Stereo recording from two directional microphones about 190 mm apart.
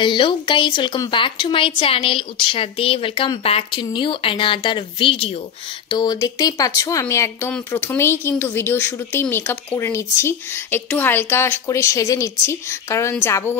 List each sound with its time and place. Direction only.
0.0 s a woman's voice: 25° left (ahead or behind)